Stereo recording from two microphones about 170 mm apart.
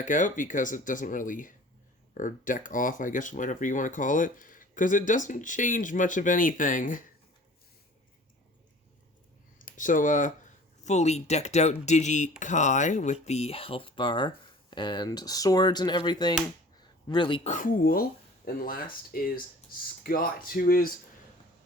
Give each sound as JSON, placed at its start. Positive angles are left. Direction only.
{"t": 0.0, "sound": "speech", "side_deg": 50}
{"t": 9.6, "sound": "speech", "side_deg": 50}
{"t": 17.5, "sound": "speech", "side_deg": 55}